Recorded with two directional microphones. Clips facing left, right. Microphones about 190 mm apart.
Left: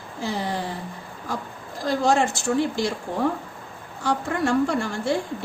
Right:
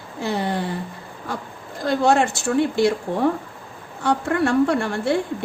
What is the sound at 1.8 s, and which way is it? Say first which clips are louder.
A woman's voice: right 3 dB; 60° right (ahead or behind).